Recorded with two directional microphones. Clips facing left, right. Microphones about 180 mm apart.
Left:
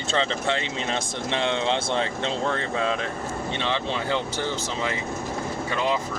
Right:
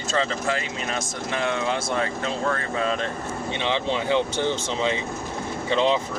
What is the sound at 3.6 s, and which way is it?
Speech, 15° right (ahead or behind).